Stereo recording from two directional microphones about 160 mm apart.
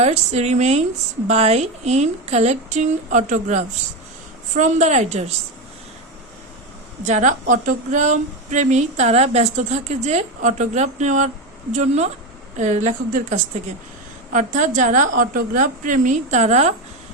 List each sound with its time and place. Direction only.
0.0 s a woman's voice: 45° right (ahead or behind)
7.0 s a woman's voice: 50° right (ahead or behind)